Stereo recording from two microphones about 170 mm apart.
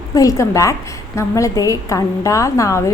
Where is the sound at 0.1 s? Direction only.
20° left (ahead or behind).